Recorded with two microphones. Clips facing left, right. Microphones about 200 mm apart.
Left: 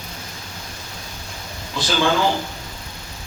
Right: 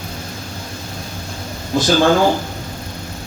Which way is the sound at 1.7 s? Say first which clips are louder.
Right 7 dB; 45° right (ahead or behind).